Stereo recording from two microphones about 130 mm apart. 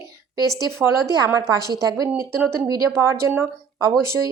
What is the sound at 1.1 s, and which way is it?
Speech, 30° right (ahead or behind).